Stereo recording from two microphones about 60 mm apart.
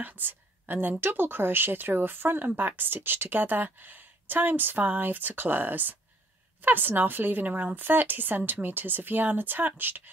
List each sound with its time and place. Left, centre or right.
0.0 s a woman's voice: right